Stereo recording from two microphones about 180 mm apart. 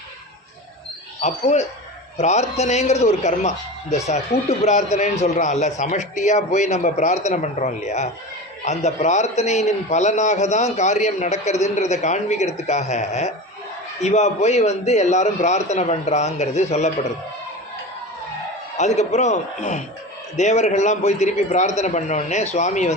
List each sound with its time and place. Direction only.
1.2 s a man's voice: 40° left (ahead or behind)
18.8 s a man's voice: 40° left (ahead or behind)